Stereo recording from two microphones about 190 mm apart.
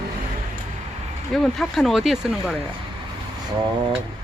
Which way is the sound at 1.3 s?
Centre (ahead or behind).